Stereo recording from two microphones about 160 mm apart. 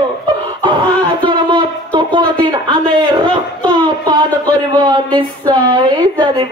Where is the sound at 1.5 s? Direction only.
30° right (ahead or behind).